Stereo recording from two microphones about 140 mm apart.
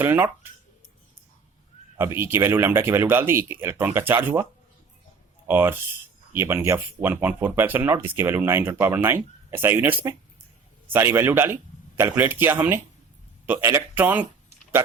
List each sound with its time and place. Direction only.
0.0 s speech: 15° right (ahead or behind)
2.0 s speech: 15° right (ahead or behind)
5.5 s speech: 15° right (ahead or behind)